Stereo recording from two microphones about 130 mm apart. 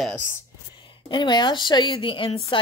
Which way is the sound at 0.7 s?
40° left (ahead or behind).